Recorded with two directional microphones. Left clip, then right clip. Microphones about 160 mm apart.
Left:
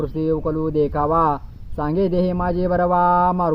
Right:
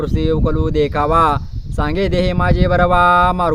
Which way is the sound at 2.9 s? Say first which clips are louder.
Right 4 dB; 50° right (ahead or behind).